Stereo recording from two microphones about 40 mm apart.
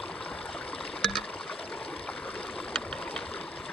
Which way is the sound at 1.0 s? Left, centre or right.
Centre.